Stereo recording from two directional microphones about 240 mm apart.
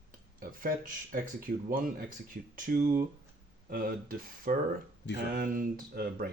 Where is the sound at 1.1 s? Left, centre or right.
Right.